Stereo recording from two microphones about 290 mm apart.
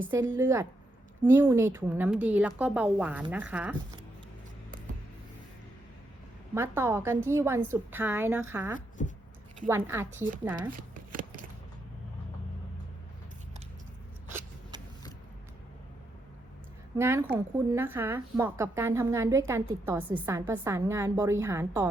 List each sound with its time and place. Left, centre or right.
0.0 s a woman's voice: centre
6.5 s a woman's voice: centre
9.0 s speech: left
9.6 s a woman's voice: centre
10.7 s shuffling cards: right
17.0 s a woman's voice: centre